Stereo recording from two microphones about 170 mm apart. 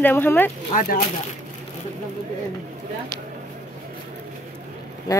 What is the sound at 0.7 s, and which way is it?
Speech, 50° left (ahead or behind).